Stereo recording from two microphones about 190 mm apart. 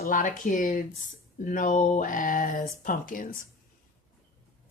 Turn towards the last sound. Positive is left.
turn(degrees=45)  # may be behind; listen again after turning